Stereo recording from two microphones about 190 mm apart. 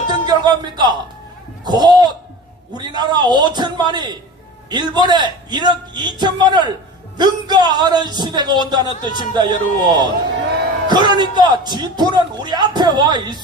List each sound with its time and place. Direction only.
0.1 s music: 20° right (ahead or behind)
1.6 s a man's voice: 20° right (ahead or behind)